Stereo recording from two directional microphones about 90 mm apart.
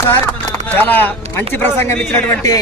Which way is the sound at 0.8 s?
20° left (ahead or behind).